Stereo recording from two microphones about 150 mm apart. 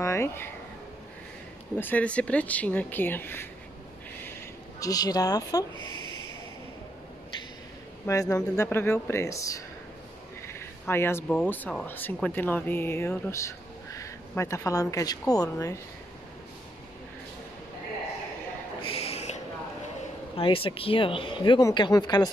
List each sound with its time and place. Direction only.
0.0 s speech: 20° left (ahead or behind)
1.8 s speech: 10° left (ahead or behind)
4.7 s speech: 25° left (ahead or behind)
8.1 s speech: 20° left (ahead or behind)
18.8 s a sound: 40° left (ahead or behind)
20.3 s speech: 35° left (ahead or behind)